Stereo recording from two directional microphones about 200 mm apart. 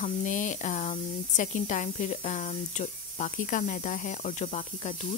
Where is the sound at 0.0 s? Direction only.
40° left (ahead or behind).